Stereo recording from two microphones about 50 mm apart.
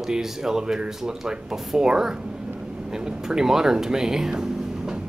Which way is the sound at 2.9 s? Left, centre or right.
Centre.